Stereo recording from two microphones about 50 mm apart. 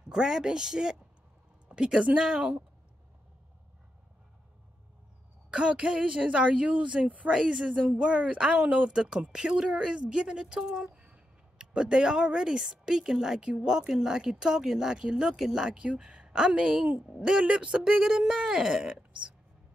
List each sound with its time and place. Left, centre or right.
0.0 s speech: centre
5.5 s speech: right
7.3 s speech: centre